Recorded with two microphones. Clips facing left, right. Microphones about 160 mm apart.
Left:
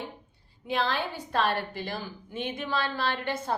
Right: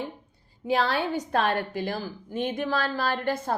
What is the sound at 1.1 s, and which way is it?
A woman's voice, 50° right (ahead or behind).